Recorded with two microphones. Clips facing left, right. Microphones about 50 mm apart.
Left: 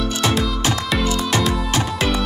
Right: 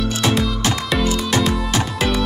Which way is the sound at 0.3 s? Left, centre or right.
Centre.